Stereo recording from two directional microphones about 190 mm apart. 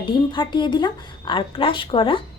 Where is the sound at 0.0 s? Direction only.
25° left (ahead or behind).